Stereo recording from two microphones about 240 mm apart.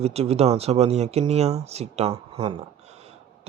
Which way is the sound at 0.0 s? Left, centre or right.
Right.